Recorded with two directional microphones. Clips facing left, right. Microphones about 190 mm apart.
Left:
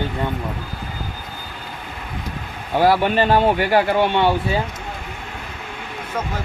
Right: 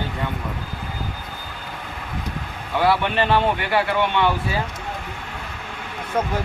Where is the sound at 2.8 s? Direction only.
40° left (ahead or behind).